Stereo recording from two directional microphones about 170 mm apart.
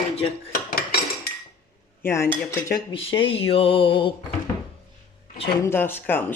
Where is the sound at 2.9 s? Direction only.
30° left (ahead or behind).